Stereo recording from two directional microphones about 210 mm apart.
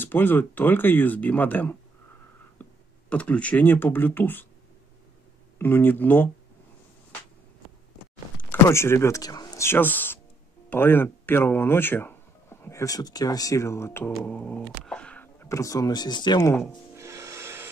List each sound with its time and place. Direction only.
0.0 s speech: 10° left (ahead or behind)
5.6 s speech: 10° left (ahead or behind)
8.4 s speech: 10° left (ahead or behind)
16.9 s music: 15° right (ahead or behind)